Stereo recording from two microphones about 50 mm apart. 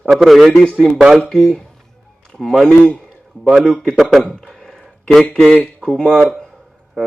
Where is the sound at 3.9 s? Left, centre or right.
Centre.